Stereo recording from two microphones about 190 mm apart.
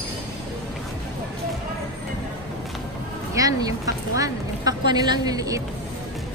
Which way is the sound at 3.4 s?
20° right (ahead or behind).